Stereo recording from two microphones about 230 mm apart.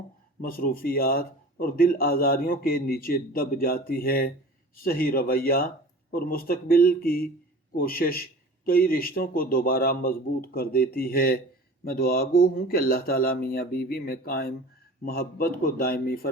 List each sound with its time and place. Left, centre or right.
0.4 s a man's voice: left